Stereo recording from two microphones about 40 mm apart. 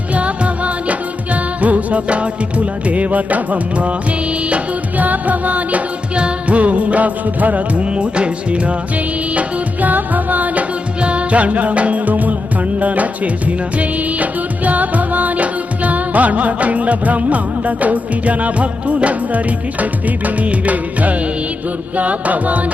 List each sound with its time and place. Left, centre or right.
0.1 s music: right
7.9 s music: right
9.3 s music: right